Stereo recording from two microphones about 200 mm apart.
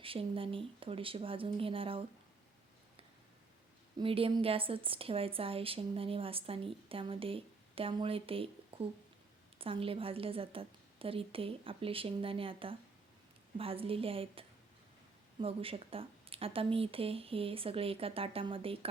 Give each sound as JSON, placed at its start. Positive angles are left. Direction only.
{"t": 0.0, "sound": "a woman's voice", "side_deg": -25}
{"t": 3.9, "sound": "a woman's voice", "side_deg": -25}